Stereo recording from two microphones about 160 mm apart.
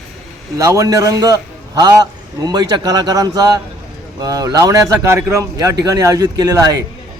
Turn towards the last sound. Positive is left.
turn(degrees=-25)  # may be behind; listen again after turning